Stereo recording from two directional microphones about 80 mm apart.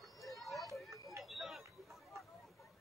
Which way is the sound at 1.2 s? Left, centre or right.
Centre.